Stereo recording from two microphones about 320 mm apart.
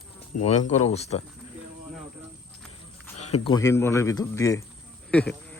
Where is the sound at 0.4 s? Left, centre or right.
Centre.